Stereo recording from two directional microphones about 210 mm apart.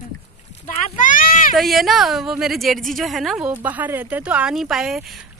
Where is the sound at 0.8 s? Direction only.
40° left (ahead or behind).